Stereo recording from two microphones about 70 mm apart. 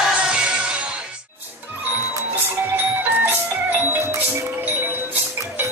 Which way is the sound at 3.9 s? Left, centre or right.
Right.